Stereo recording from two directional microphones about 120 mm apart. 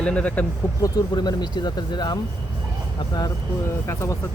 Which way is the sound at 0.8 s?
35° left (ahead or behind).